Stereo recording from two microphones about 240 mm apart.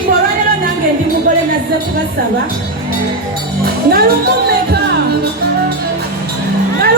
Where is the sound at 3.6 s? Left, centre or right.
Right.